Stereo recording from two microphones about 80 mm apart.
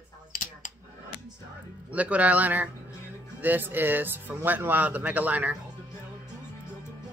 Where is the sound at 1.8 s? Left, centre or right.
Centre.